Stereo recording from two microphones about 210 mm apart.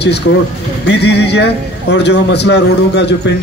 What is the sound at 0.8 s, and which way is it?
A man's voice, 55° left (ahead or behind).